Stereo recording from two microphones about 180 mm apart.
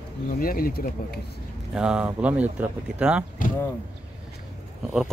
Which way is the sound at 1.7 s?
5° right (ahead or behind).